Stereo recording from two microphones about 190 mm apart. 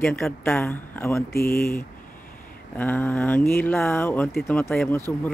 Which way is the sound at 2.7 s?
10° left (ahead or behind).